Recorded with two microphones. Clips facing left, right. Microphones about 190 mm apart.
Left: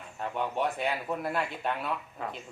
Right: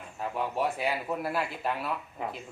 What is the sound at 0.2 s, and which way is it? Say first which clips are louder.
Speech: even; 5° right (ahead or behind).